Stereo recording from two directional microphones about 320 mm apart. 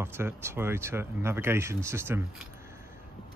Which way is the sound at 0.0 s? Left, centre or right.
Centre.